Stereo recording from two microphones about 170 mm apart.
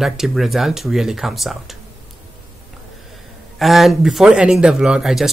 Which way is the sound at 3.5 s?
Centre (ahead or behind).